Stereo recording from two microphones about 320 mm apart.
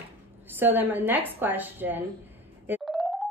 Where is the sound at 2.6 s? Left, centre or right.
Centre.